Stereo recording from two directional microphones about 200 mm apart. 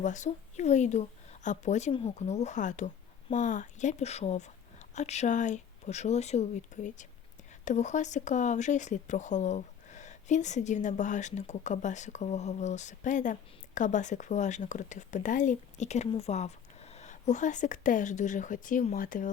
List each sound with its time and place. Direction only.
0.0 s speech: 35° left (ahead or behind)